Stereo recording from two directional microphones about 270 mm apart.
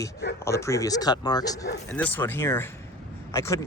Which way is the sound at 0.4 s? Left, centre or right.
Centre.